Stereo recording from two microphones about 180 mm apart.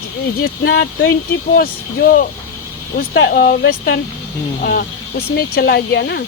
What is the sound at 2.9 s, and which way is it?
Speech, 75° left (ahead or behind).